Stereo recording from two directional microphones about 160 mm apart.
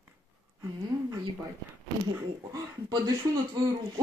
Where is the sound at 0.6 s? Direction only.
20° right (ahead or behind).